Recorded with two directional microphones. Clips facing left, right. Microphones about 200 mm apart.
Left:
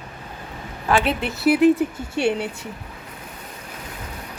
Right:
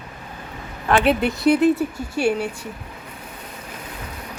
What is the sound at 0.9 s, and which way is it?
A woman's voice, centre (ahead or behind).